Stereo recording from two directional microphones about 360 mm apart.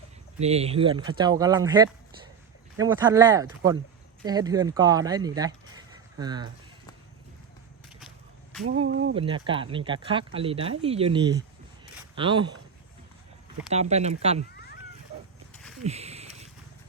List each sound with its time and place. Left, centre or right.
0.3 s speech: centre
8.6 s speech: right
9.1 s speech: centre
13.7 s speech: centre
15.1 s a sound: centre